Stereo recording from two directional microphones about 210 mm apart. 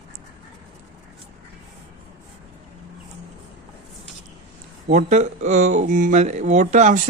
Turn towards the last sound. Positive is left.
turn(degrees=-35)  # may be behind; listen again after turning